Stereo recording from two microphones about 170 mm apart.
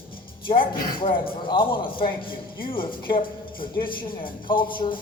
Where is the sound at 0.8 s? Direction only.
55° left (ahead or behind).